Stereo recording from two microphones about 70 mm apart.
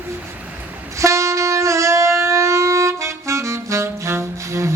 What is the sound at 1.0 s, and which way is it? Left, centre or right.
Wind instrument, right.